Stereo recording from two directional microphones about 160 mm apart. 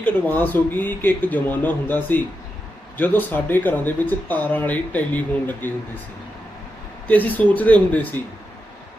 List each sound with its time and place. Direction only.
0.0 s speech: 10° left (ahead or behind)
7.1 s speech: 10° left (ahead or behind)